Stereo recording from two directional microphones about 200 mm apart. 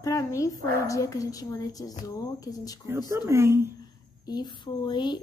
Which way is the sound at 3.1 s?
15° right (ahead or behind).